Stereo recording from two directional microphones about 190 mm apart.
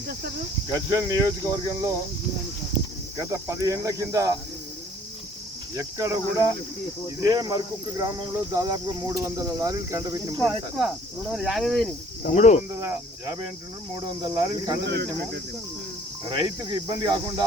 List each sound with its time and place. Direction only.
0.7 s speech: 20° right (ahead or behind)
3.2 s speech: 15° right (ahead or behind)
5.7 s speech: 15° right (ahead or behind)
7.3 s speech: 20° right (ahead or behind)
10.4 s speech: centre (ahead or behind)
12.2 s speech: 40° left (ahead or behind)
12.8 s speech: 15° right (ahead or behind)
14.8 s speech: 65° right (ahead or behind)
16.3 s speech: 20° right (ahead or behind)